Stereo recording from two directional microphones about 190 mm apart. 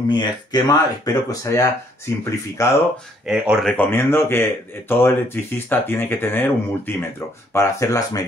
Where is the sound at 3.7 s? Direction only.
10° left (ahead or behind).